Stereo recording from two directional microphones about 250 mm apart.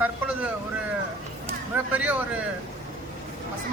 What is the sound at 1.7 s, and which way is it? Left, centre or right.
Speech, centre.